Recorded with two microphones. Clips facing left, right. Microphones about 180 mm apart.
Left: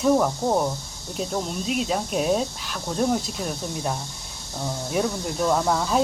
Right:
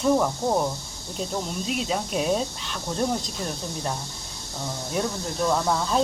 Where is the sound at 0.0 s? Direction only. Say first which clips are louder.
Left 2 dB; 5° left (ahead or behind).